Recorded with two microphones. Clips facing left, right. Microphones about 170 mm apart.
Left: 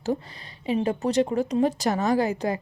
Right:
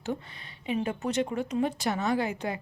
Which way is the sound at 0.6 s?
35° left (ahead or behind).